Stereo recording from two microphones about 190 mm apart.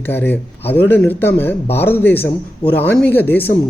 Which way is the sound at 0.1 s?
10° left (ahead or behind).